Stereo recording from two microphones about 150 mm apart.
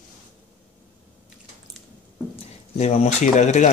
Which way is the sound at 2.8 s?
45° left (ahead or behind).